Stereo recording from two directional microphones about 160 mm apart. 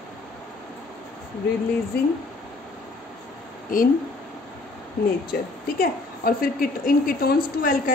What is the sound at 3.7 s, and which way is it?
Speech, 60° left (ahead or behind).